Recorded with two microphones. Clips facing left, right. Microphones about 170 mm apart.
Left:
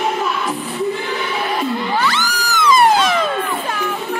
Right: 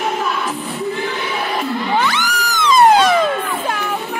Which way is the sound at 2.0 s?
20° right (ahead or behind).